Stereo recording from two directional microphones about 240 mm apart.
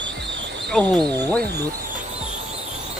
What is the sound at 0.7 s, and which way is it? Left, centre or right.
Speech, centre.